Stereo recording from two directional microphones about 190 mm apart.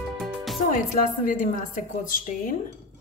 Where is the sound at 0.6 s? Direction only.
45° left (ahead or behind).